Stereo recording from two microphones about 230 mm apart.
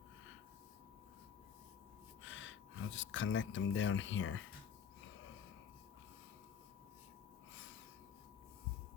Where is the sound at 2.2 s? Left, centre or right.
Left.